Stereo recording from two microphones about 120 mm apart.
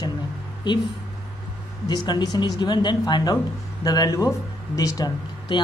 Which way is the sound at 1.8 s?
35° left (ahead or behind).